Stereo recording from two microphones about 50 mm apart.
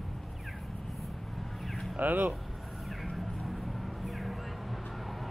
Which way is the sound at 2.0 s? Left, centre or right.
Right.